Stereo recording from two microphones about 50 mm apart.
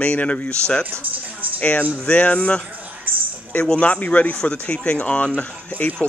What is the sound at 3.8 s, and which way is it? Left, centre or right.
Speech, left.